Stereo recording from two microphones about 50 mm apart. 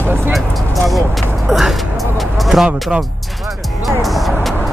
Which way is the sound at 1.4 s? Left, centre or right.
Centre.